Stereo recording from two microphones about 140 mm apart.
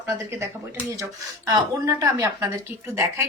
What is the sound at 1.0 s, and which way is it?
A woman's voice, 25° right (ahead or behind).